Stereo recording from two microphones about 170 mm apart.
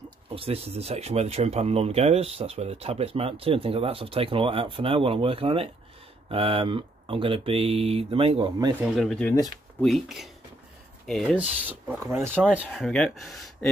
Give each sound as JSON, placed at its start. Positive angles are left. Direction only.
{"t": 0.3, "sound": "speech", "side_deg": -35}
{"t": 8.8, "sound": "speech", "side_deg": 0}
{"t": 11.3, "sound": "speech", "side_deg": -10}
{"t": 12.5, "sound": "speech", "side_deg": 0}